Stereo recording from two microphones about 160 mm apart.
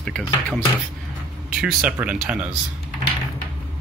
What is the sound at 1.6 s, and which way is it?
Speech, 10° right (ahead or behind).